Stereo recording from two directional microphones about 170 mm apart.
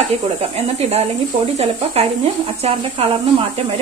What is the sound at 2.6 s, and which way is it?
Speech, 35° right (ahead or behind).